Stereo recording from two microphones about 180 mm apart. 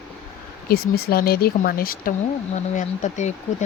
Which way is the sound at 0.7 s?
60° left (ahead or behind).